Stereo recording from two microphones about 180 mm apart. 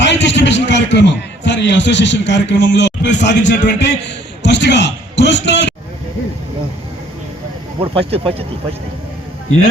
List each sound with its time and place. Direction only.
0.0 s a man's voice: 80° left
7.8 s speech: 30° right (ahead or behind)